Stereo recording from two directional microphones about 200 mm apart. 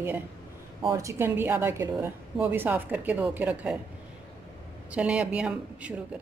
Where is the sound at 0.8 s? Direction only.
15° right (ahead or behind).